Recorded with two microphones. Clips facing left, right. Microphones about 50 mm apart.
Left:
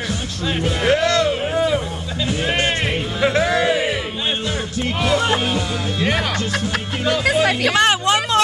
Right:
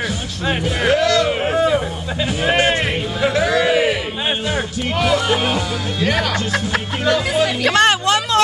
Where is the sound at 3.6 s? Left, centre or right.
Right.